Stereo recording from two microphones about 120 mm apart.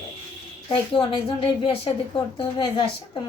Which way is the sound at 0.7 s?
50° left (ahead or behind).